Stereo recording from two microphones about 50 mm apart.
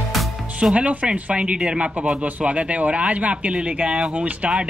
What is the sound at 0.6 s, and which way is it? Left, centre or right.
Speech, right.